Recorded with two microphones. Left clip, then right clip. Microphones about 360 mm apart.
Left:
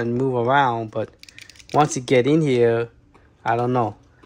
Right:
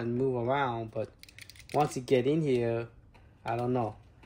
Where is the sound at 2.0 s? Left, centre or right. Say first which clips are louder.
Left 10 dB; left.